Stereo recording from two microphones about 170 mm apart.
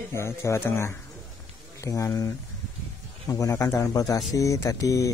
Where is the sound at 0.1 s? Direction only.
15° left (ahead or behind).